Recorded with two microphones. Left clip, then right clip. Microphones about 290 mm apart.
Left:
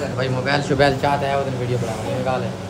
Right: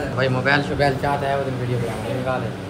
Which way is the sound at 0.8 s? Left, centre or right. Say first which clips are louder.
Left 3 dB; centre.